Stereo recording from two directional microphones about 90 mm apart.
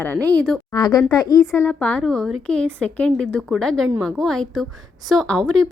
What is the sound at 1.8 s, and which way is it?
A woman's voice, 15° left (ahead or behind).